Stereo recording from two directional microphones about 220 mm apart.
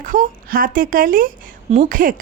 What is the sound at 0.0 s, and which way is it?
Speech, 40° right (ahead or behind).